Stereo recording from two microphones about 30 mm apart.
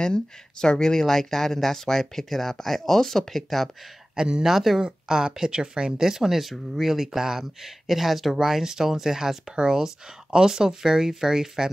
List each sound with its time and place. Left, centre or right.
0.0 s speech: left; by 3.7 s centre
4.1 s speech: right; by 8.4 s centre
8.4 s speech: centre